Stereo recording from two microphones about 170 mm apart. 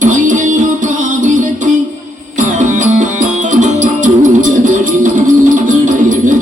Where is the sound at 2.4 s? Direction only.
50° right (ahead or behind).